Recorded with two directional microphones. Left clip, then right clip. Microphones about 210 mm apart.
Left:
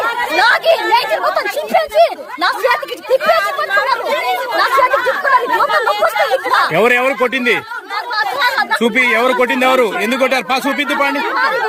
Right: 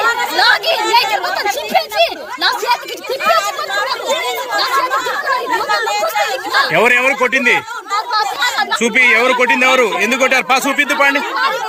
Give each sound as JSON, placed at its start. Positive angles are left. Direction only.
{"t": 0.3, "sound": "chatter", "side_deg": 10}
{"t": 2.0, "sound": "speech", "side_deg": 5}
{"t": 3.2, "sound": "chatter", "side_deg": -25}
{"t": 6.5, "sound": "speech", "side_deg": 10}
{"t": 8.1, "sound": "chatter", "side_deg": 0}
{"t": 8.8, "sound": "speech", "side_deg": 15}